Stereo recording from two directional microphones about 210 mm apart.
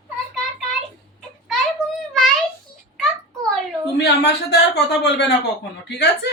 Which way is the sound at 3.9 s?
55° left (ahead or behind).